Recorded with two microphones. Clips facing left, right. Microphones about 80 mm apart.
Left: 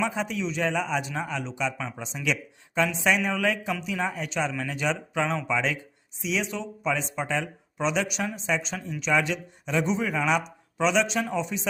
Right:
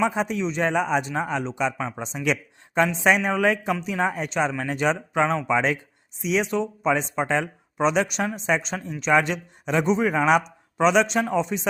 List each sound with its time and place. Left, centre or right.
0.0 s a man's voice: right